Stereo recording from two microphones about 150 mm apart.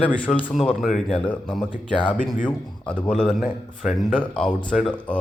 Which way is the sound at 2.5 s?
5° left (ahead or behind).